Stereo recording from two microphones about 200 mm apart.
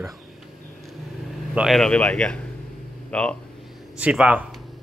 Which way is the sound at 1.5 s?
Centre (ahead or behind).